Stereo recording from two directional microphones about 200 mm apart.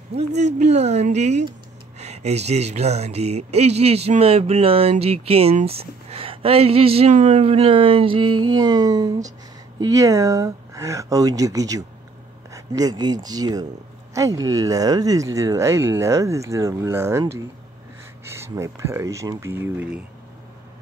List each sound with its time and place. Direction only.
0.4 s speech: 35° right (ahead or behind)
8.5 s music: 20° right (ahead or behind)
9.8 s speech: 15° right (ahead or behind)